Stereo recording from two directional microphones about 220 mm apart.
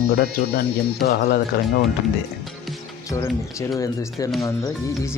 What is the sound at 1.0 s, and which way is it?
Speech, 50° left (ahead or behind).